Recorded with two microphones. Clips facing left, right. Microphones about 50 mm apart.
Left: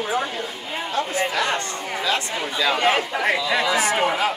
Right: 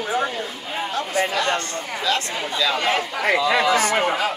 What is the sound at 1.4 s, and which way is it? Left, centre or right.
Speech, centre.